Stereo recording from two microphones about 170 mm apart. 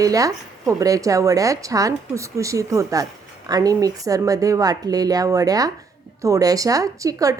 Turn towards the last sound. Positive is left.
turn(degrees=-20)  # may be behind; listen again after turning